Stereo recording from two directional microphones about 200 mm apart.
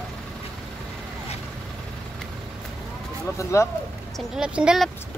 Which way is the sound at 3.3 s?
15° left (ahead or behind).